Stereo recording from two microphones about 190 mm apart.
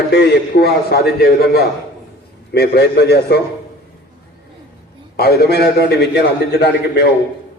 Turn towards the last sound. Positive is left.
turn(degrees=60)  # may be behind; listen again after turning